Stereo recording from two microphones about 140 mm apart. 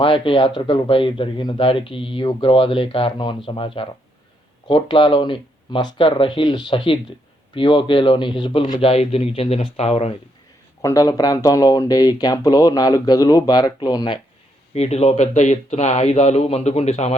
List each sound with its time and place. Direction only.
0.0 s speech: 40° left (ahead or behind)
10.8 s speech: 25° left (ahead or behind)
14.7 s speech: 50° left (ahead or behind)